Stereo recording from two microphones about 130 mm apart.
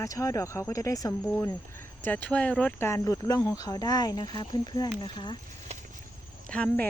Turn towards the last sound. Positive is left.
turn(degrees=10)  # may be behind; listen again after turning